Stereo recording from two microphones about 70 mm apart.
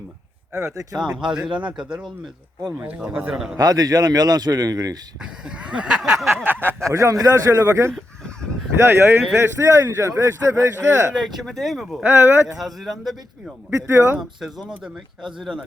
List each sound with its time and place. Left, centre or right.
0.9 s speech: centre
3.6 s speech: right
5.2 s speech: centre
6.0 s speech: centre
6.3 s a man's voice: right
6.9 s a man's voice: right
7.6 s a man's voice: right
11.3 s speech: centre
12.0 s a man's voice: right
12.5 s speech: centre
13.7 s a man's voice: right
15.4 s speech: centre